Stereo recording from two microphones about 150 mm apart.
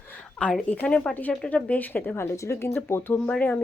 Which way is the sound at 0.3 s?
5° left (ahead or behind).